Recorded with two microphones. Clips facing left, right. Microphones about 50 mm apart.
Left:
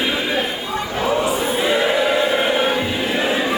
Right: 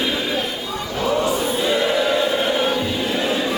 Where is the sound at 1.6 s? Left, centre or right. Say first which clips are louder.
Left 2 dB; centre.